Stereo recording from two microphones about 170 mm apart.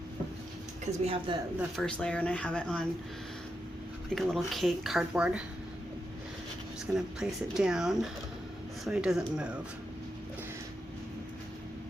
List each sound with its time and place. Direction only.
1.0 s speech: 30° right (ahead or behind)
1.5 s speech: centre (ahead or behind)
4.1 s speech: centre (ahead or behind)
6.9 s speech: 5° right (ahead or behind)